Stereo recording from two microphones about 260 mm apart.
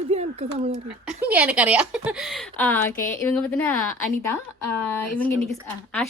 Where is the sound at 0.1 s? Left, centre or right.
Right.